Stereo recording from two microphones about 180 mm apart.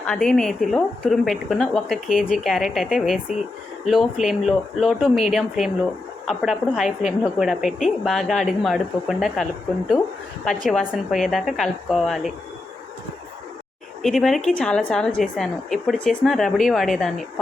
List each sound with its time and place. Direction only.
0.0 s speech: 5° left (ahead or behind)
14.0 s speech: centre (ahead or behind)